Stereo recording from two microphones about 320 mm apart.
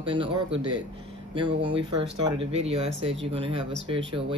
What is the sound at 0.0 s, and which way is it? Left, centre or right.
Speech, centre.